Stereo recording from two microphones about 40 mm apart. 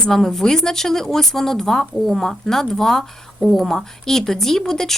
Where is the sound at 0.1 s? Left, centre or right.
Centre.